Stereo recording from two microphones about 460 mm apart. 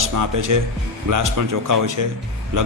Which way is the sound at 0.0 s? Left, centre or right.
Right.